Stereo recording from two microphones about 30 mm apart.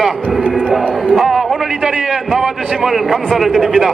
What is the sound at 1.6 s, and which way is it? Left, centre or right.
A man's voice, centre.